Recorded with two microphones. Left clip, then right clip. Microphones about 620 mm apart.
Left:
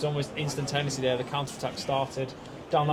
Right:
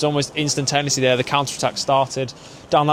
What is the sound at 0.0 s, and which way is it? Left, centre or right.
Speech, right.